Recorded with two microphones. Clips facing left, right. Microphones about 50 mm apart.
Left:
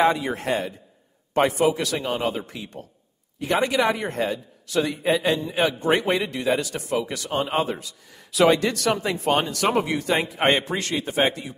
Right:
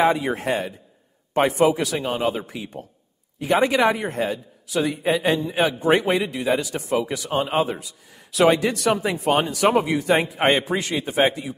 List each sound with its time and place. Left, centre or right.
0.0 s a man's voice: centre
3.9 s a man's voice: centre